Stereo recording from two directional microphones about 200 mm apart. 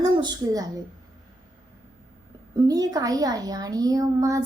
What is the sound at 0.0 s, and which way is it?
Speech, 20° right (ahead or behind).